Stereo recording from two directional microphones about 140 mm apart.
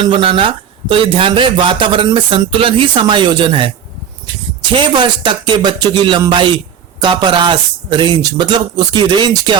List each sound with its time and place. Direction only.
0.0 s a man's voice: 40° right (ahead or behind)
4.7 s a man's voice: 35° right (ahead or behind)